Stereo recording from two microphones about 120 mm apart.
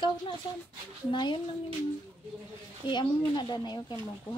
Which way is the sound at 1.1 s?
40° left (ahead or behind).